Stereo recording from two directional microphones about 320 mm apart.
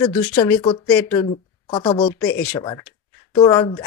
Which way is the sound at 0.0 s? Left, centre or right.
Centre.